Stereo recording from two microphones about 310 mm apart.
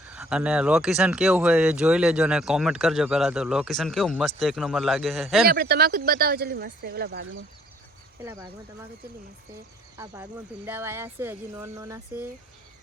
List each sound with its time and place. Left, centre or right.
0.1 s speech: centre
5.5 s speech: right
8.2 s speech: centre
10.7 s speech: centre